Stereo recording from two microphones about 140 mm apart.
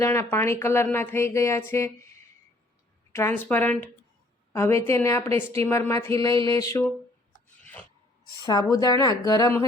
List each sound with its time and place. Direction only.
0.0 s speech: 20° left (ahead or behind)
3.1 s a woman's voice: 20° left (ahead or behind)
7.6 s filing: 10° left (ahead or behind)
8.4 s a woman's voice: 25° left (ahead or behind)